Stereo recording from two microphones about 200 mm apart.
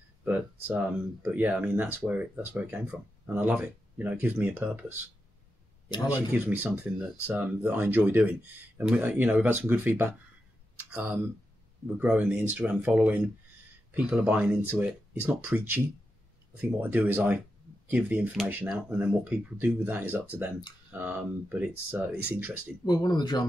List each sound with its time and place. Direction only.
0.2 s speech: 10° right (ahead or behind)
6.3 s speech: 10° right (ahead or behind)
16.8 s speech: 10° right (ahead or behind)
22.8 s speech: 20° left (ahead or behind)